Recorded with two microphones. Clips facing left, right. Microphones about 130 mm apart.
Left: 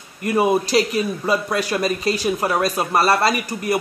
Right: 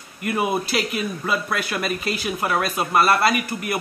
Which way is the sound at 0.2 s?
35° left (ahead or behind).